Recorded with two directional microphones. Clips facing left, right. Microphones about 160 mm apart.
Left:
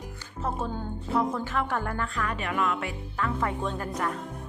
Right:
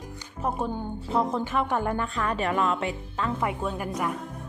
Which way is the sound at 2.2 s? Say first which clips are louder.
Right 4 dB; 35° right (ahead or behind).